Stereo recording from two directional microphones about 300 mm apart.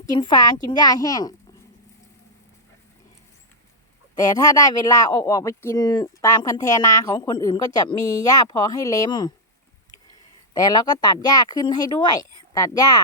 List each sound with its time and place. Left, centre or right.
0.0 s speech: centre
4.2 s speech: centre
10.5 s speech: centre